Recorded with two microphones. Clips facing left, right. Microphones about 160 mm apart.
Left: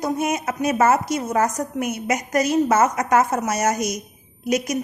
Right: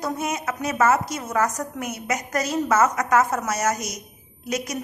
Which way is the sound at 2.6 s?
30° left (ahead or behind).